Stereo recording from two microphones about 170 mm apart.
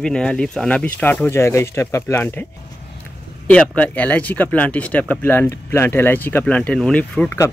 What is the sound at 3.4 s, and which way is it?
Speech, 5° left (ahead or behind).